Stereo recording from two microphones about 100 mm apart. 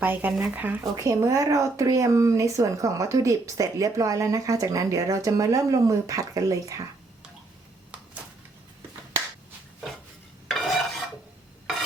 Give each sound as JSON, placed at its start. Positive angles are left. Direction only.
{"t": 0.0, "sound": "speech", "side_deg": -20}
{"t": 0.9, "sound": "speech", "side_deg": -30}
{"t": 10.5, "sound": "filing", "side_deg": 0}